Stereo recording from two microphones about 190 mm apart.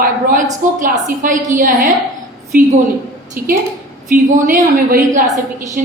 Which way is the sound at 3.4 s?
50° right (ahead or behind).